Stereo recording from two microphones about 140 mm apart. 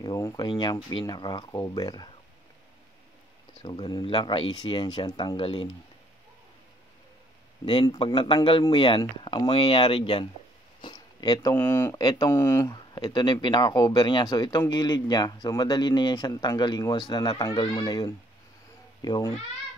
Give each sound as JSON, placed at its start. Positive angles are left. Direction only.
{"t": 0.0, "sound": "speech", "side_deg": 25}
{"t": 3.6, "sound": "speech", "side_deg": 35}
{"t": 7.6, "sound": "speech", "side_deg": 30}
{"t": 10.8, "sound": "a sound", "side_deg": 30}
{"t": 11.5, "sound": "speech", "side_deg": 15}
{"t": 12.7, "sound": "speech", "side_deg": 30}